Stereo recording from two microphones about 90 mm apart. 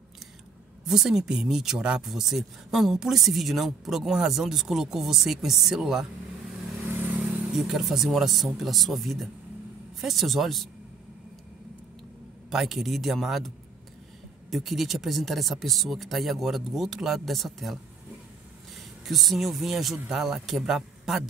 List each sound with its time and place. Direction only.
0.8 s speech: 5° right (ahead or behind)
6.8 s vehicle: 20° right (ahead or behind)
7.2 s speech: 10° right (ahead or behind)
12.4 s speech: 5° right (ahead or behind)
14.5 s speech: centre (ahead or behind)
19.0 s speech: centre (ahead or behind)